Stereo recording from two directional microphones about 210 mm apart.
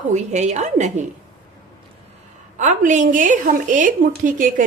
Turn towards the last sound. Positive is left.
turn(degrees=-40)  # may be behind; listen again after turning